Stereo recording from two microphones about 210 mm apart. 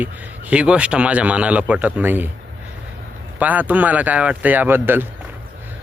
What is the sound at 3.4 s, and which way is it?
Speech, 10° right (ahead or behind).